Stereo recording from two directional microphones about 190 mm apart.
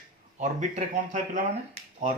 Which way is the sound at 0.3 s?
40° right (ahead or behind).